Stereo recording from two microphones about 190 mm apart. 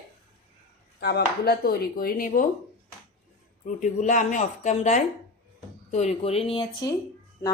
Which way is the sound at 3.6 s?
40° left (ahead or behind).